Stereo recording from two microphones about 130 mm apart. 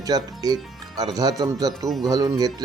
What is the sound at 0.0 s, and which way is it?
Speech, 30° right (ahead or behind).